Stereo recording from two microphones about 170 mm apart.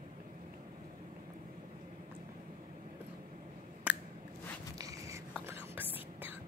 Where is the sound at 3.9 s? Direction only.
10° right (ahead or behind).